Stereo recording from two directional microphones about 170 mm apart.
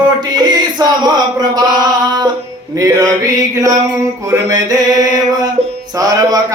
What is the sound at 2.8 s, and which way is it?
Mantra, 20° right (ahead or behind).